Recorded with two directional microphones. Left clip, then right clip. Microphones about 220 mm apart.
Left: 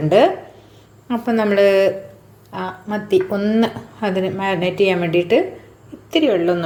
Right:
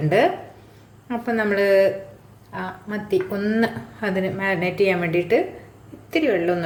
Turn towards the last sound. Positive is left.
turn(degrees=10)  # may be behind; listen again after turning